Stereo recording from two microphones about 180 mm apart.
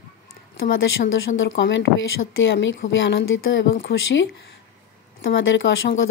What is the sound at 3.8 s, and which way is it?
Speech, 65° left (ahead or behind).